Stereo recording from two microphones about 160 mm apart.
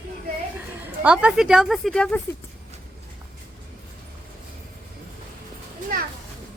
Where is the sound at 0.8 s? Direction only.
10° right (ahead or behind).